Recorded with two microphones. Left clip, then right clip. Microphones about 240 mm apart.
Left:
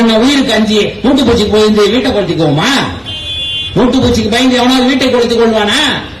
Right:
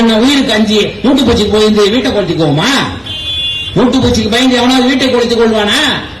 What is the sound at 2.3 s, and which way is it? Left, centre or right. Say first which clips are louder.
A man's voice: even; left.